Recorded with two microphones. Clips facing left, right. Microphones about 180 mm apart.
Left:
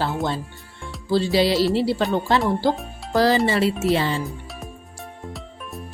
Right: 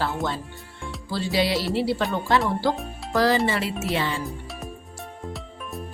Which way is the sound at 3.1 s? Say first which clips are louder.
Left 3 dB; 35° left (ahead or behind).